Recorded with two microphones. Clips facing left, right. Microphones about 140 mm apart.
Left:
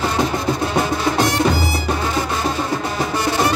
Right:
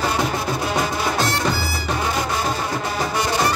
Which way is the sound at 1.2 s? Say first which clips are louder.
Left 5 dB; 15° left (ahead or behind).